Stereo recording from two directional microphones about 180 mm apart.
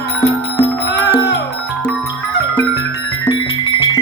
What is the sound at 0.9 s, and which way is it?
Music, 70° left (ahead or behind).